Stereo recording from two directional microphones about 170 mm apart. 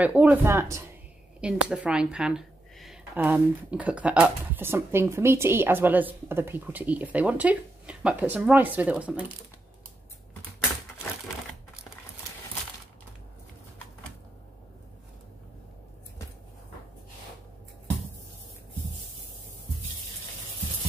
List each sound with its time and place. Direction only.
0.0 s speech: 10° right (ahead or behind)